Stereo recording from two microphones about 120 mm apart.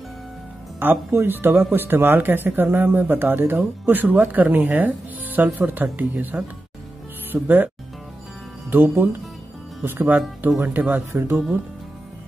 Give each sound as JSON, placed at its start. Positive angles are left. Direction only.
{"t": 0.7, "sound": "speech", "side_deg": -15}